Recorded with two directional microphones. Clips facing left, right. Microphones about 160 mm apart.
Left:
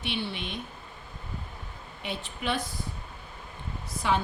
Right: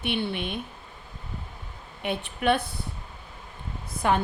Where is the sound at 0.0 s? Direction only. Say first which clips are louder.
Right 5 dB; 55° right (ahead or behind).